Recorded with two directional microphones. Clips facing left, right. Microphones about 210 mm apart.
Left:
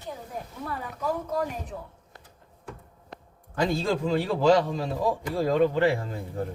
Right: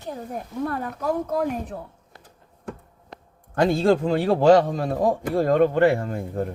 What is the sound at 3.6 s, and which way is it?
Speech, 55° right (ahead or behind).